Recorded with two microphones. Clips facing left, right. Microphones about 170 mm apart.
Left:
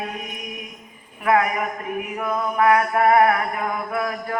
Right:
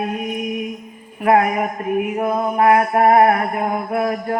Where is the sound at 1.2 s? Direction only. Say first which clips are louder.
Right 4 dB; 35° right (ahead or behind).